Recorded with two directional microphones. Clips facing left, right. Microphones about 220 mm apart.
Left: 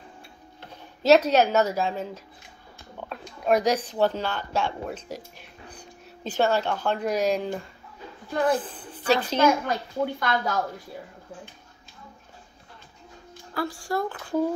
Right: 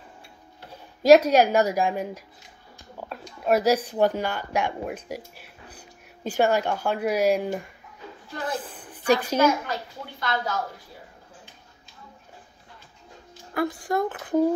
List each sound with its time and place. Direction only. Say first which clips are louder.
0.6 s speech: right 2 dB; 10° right (ahead or behind)
8.9 s a woman's voice: right 2 dB; 15° right (ahead or behind)
9.7 s speech: left 7 dB; 50° left (ahead or behind)
13.6 s speech: right 3 dB; 20° right (ahead or behind)